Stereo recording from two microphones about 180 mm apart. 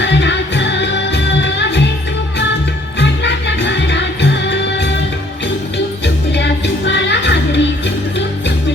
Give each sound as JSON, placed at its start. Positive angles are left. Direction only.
{"t": 0.0, "sound": "music", "side_deg": 80}
{"t": 3.0, "sound": "music", "side_deg": 75}
{"t": 6.3, "sound": "music", "side_deg": 75}